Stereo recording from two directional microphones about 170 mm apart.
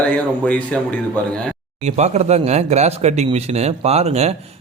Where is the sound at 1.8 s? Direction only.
40° right (ahead or behind).